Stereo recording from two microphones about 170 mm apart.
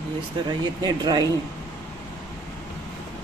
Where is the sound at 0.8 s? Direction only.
25° right (ahead or behind).